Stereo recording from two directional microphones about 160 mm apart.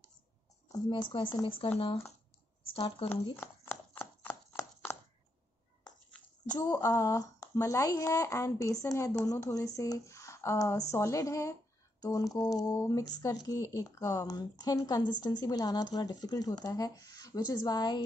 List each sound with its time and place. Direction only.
0.7 s speech: 25° left (ahead or behind)
2.7 s speech: 35° left (ahead or behind)
4.0 s chopping: 10° left (ahead or behind)
6.5 s a woman's voice: 20° left (ahead or behind)